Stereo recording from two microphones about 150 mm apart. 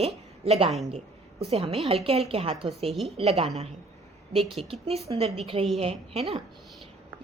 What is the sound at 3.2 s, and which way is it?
Speech, 40° right (ahead or behind).